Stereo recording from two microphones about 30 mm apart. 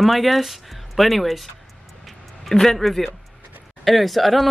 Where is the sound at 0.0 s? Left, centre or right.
Centre.